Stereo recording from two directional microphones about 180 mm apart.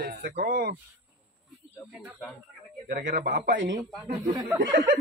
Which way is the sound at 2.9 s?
50° right (ahead or behind).